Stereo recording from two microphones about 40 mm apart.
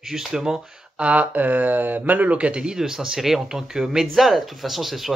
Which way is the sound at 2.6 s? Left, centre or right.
Centre.